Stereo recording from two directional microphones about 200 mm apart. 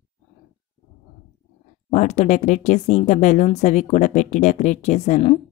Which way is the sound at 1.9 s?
35° left (ahead or behind).